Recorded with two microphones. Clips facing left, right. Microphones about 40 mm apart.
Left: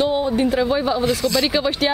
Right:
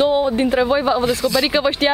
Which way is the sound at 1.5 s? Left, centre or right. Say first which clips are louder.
Right 2 dB; centre.